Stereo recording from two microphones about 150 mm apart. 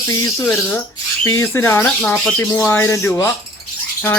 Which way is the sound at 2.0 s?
5° left (ahead or behind).